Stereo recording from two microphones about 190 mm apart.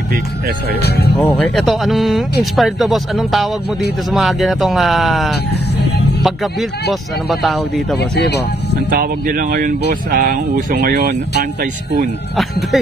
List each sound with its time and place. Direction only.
0.8 s speech: 55° left (ahead or behind)
1.1 s speech: 5° left (ahead or behind)
8.0 s speech: 60° left (ahead or behind)
8.9 s speech: 50° right (ahead or behind)